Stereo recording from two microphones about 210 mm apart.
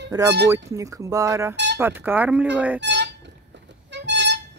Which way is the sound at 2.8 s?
55° right (ahead or behind).